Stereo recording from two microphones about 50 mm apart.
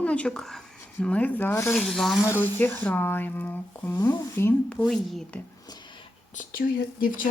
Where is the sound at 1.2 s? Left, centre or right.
Left.